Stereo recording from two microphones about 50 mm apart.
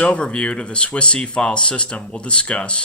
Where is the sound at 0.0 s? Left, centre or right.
Left.